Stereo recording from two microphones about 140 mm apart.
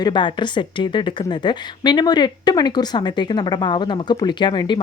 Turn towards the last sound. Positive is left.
turn(degrees=30)  # may be behind; listen again after turning